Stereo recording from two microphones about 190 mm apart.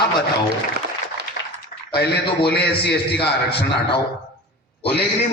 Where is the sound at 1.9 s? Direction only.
60° left (ahead or behind).